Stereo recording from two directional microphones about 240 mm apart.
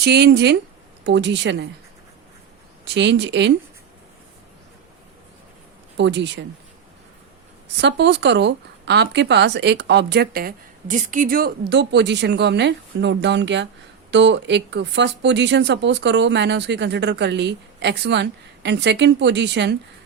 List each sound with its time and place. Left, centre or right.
0.0 s speech: right
2.8 s speech: right
6.0 s speech: right
7.8 s speech: right